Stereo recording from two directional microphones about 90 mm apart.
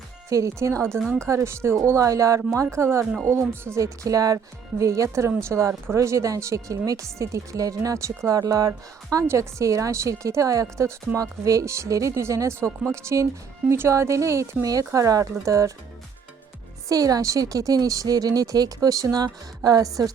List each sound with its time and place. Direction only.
0.3 s a woman's voice: 35° right (ahead or behind)
0.9 s speech: 5° left (ahead or behind)
1.3 s a woman's voice: 30° right (ahead or behind)
9.1 s a woman's voice: 30° right (ahead or behind)
16.9 s speech: 40° right (ahead or behind)